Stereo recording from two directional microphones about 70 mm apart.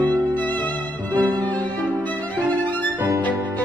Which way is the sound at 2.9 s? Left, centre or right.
Right.